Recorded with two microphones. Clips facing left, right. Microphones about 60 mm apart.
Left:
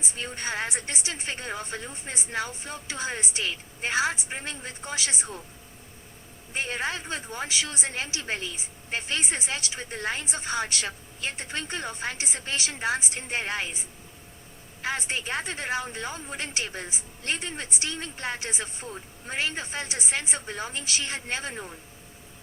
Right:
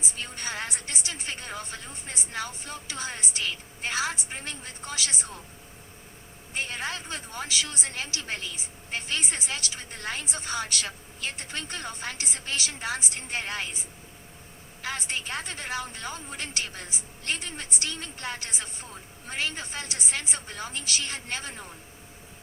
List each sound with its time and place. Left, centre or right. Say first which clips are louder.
0.2 s a woman's voice: left 4 dB; left
6.5 s a woman's voice: left 3 dB; left
14.8 s a woman's voice: left 3 dB; left